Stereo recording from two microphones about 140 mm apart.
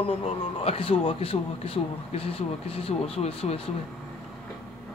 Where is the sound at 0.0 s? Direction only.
45° left (ahead or behind).